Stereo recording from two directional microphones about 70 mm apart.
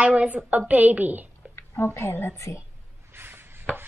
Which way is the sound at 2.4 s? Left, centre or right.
Left.